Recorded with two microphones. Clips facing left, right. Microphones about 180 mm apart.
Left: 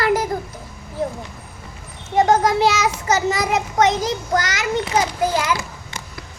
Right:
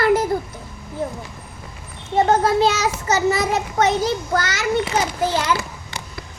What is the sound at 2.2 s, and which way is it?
Speech, 10° left (ahead or behind).